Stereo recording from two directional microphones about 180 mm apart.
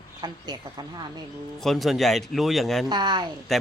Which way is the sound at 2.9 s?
25° right (ahead or behind).